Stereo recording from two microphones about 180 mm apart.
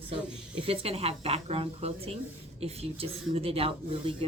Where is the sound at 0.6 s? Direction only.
35° right (ahead or behind).